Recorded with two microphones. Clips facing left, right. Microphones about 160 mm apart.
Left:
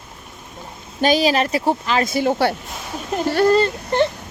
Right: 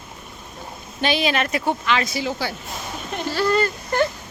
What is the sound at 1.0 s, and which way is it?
A woman's voice, 40° left (ahead or behind).